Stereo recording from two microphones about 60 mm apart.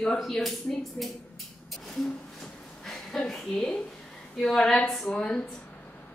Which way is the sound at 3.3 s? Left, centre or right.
Centre.